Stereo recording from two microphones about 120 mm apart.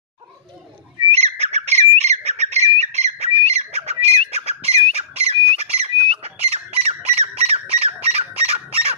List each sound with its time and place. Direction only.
1.1 s bird: 65° right (ahead or behind)
2.8 s squawk: 65° right (ahead or behind)